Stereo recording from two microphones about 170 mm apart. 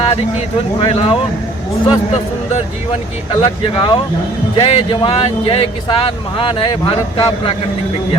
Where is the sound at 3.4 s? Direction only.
25° left (ahead or behind).